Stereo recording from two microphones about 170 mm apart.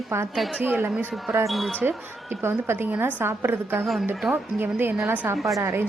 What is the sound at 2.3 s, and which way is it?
A woman's voice, 15° right (ahead or behind).